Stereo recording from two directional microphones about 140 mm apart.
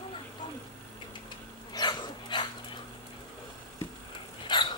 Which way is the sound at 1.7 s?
30° left (ahead or behind).